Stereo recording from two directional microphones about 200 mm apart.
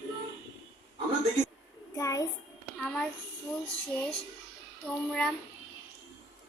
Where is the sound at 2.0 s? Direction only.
15° left (ahead or behind).